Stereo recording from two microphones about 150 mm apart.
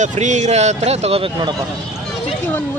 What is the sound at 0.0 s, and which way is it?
A man's voice, 50° right (ahead or behind).